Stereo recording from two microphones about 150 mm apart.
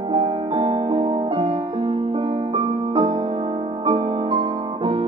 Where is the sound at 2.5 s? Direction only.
40° right (ahead or behind).